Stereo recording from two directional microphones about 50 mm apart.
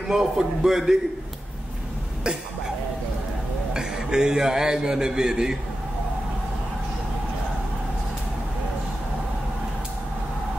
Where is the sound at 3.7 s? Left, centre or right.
Centre.